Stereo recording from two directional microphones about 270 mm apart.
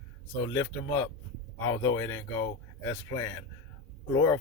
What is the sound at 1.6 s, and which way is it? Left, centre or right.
Speech, centre.